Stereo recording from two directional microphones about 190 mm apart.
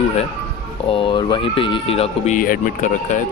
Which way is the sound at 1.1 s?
25° left (ahead or behind).